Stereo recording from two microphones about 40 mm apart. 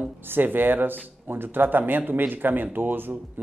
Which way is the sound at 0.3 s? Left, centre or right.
Right.